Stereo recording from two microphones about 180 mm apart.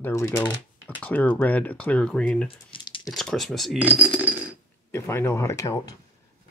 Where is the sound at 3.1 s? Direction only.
Centre (ahead or behind).